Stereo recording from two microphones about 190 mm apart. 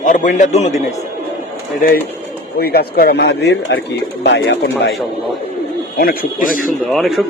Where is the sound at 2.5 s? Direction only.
55° left (ahead or behind); by 4.6 s 70° left (ahead or behind).